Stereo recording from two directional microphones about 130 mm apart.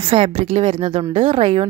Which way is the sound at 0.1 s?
50° right (ahead or behind).